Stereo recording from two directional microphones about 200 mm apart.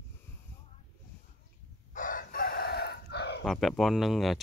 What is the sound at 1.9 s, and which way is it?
Chicken, 40° left (ahead or behind).